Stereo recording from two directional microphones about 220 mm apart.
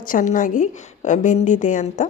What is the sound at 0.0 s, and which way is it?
Speech, 35° left (ahead or behind).